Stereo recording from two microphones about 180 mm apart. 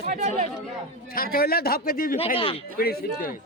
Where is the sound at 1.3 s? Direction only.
60° left (ahead or behind).